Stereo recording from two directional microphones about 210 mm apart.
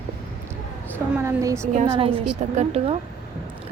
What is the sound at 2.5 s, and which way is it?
Speech, 30° right (ahead or behind).